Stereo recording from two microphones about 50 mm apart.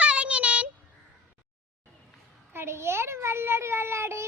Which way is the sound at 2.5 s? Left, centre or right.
Right.